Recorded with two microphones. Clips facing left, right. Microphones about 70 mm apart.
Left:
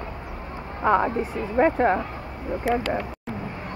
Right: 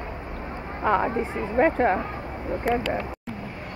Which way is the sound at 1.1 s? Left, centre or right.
Right.